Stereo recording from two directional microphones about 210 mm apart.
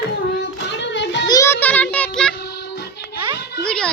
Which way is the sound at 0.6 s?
60° left (ahead or behind).